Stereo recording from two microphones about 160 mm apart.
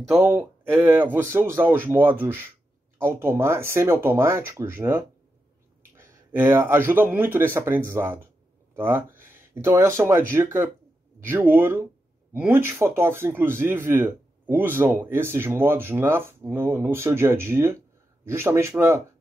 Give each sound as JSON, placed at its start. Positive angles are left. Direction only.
{"t": 0.1, "sound": "speech", "side_deg": -10}